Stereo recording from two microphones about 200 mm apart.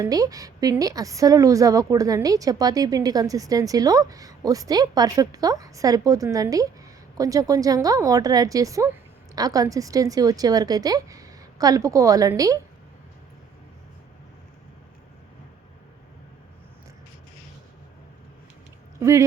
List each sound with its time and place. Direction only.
0.0 s a woman's voice: 20° right (ahead or behind)
18.9 s speech: 15° right (ahead or behind)